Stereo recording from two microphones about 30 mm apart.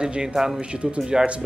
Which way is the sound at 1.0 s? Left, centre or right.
Right.